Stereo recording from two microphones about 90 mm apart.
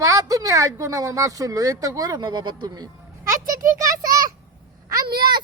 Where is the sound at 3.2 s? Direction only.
40° right (ahead or behind).